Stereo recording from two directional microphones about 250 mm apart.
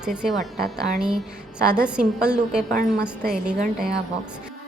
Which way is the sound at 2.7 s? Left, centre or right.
Right.